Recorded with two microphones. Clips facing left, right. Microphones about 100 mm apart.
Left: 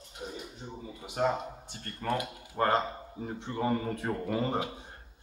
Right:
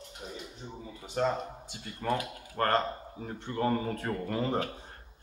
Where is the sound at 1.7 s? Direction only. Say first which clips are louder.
Right 1 dB; 5° right (ahead or behind).